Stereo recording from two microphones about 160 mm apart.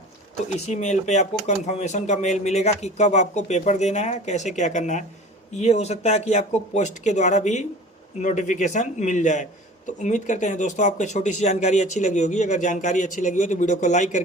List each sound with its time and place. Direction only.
0.5 s speech: 45° left (ahead or behind)